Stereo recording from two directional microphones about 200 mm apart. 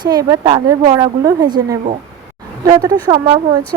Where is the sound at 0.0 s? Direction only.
20° right (ahead or behind).